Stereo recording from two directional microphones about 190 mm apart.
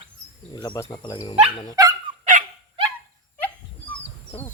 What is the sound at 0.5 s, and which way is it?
Speech, 20° left (ahead or behind).